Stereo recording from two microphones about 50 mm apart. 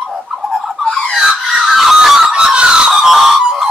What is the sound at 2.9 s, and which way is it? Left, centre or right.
Screaming, centre.